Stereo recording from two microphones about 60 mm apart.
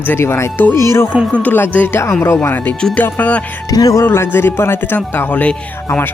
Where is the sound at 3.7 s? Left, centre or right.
Left.